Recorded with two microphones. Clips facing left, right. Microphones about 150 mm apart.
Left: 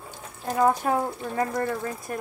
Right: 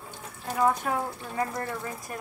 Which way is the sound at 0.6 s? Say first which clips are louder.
Left 4 dB; 35° left (ahead or behind).